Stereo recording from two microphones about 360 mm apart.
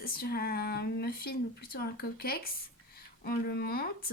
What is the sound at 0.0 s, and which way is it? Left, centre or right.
Speech, left.